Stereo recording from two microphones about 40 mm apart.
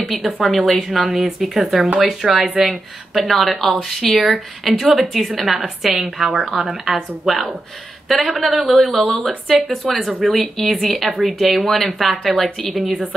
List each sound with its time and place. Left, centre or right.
0.4 s a woman's voice: centre